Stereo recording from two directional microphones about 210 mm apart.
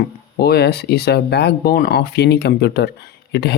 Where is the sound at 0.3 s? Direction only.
50° left (ahead or behind).